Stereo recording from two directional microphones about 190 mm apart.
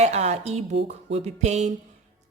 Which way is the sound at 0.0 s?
35° right (ahead or behind).